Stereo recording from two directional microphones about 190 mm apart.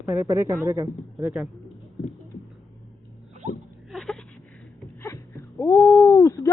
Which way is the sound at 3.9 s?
Centre (ahead or behind).